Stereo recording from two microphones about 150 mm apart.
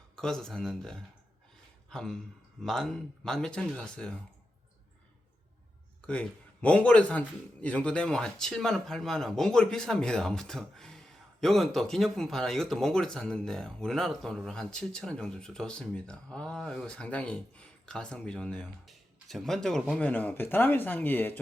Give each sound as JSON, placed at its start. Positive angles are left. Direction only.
{"t": 0.2, "sound": "a man's voice", "side_deg": 5}
{"t": 6.1, "sound": "a man's voice", "side_deg": 10}